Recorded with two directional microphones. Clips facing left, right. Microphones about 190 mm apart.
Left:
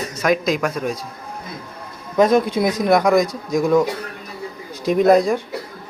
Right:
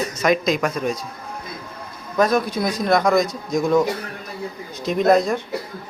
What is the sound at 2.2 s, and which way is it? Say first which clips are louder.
Speech: left 4 dB; 25° left (ahead or behind).